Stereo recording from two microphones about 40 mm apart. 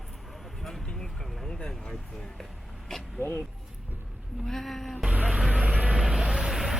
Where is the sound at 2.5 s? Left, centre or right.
Centre.